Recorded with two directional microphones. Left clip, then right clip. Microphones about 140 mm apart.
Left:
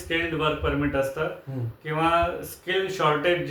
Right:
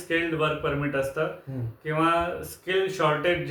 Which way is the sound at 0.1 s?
25° right (ahead or behind).